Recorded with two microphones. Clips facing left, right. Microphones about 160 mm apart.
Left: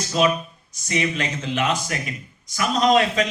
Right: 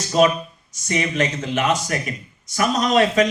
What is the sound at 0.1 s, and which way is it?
A man's voice, 45° right (ahead or behind).